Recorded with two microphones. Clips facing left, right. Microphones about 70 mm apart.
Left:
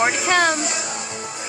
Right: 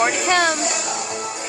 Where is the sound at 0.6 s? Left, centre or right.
Right.